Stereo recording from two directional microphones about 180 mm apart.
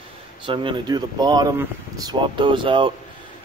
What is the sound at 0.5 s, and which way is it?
Speech, 25° right (ahead or behind).